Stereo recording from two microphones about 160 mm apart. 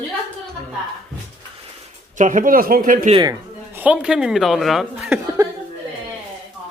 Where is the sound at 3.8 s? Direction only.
5° right (ahead or behind).